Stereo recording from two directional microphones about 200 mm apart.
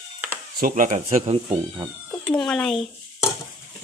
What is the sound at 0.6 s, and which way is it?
Speech, 40° right (ahead or behind).